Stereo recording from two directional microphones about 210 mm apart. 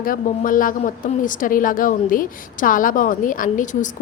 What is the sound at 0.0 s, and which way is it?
A woman's voice, 40° left (ahead or behind).